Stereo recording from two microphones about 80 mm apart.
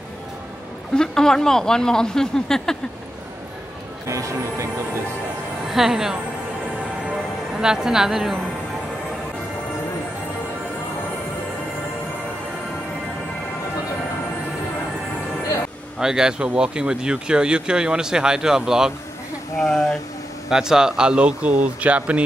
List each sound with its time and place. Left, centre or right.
0.9 s speech: centre
4.1 s speech: right
5.7 s a woman's voice: centre
7.5 s speech: centre
16.0 s speech: centre
19.6 s speech: centre
20.4 s speech: centre